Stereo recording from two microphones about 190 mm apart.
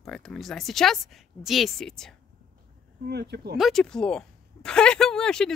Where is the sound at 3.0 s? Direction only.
60° right (ahead or behind).